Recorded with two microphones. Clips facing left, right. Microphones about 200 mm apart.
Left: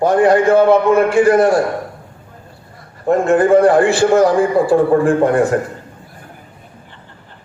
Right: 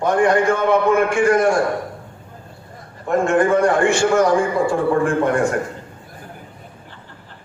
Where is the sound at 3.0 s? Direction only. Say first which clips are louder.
Left 4 dB; 35° left (ahead or behind).